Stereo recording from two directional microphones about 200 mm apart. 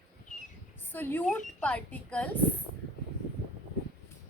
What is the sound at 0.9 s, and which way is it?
Speech, 10° left (ahead or behind).